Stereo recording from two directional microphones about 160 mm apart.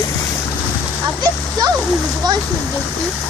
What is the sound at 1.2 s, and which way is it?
Speech, 25° right (ahead or behind).